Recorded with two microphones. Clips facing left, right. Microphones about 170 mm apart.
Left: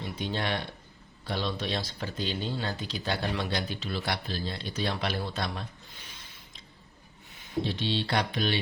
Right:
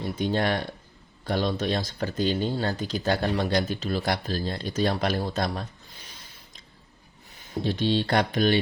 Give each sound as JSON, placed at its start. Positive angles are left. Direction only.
{"t": 0.0, "sound": "speech", "side_deg": -45}
{"t": 7.6, "sound": "speech", "side_deg": -45}